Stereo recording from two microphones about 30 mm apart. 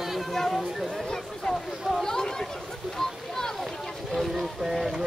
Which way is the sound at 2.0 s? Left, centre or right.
Centre.